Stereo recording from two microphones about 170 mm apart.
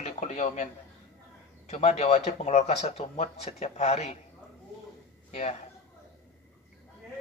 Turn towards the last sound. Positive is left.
turn(degrees=40)  # may be behind; listen again after turning